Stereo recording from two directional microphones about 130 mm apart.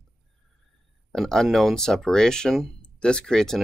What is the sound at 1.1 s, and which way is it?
Speech, centre (ahead or behind).